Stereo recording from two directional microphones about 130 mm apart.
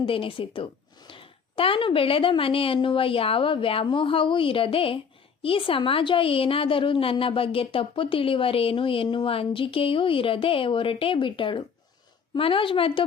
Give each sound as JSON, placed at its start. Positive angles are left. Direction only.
{"t": 0.0, "sound": "a woman's voice", "side_deg": 45}